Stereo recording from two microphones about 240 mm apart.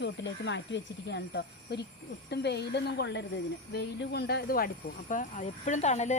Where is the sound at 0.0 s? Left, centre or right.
Left.